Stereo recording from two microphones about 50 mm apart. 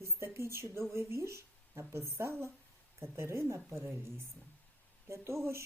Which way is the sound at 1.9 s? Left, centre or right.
Right.